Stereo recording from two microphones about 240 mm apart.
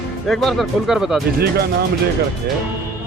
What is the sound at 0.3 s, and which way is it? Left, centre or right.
Speech, centre.